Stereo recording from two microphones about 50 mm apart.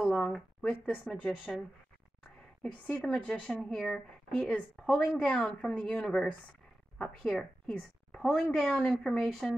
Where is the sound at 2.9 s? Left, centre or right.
Centre.